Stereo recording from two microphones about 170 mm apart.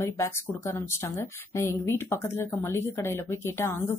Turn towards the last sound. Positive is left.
turn(degrees=15)  # may be behind; listen again after turning